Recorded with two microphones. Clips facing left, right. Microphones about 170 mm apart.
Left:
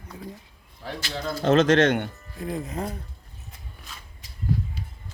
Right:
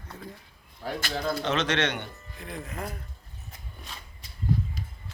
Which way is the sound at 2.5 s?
30° left (ahead or behind).